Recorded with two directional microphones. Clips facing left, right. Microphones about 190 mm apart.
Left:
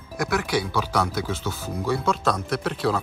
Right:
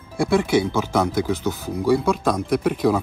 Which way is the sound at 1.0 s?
15° right (ahead or behind).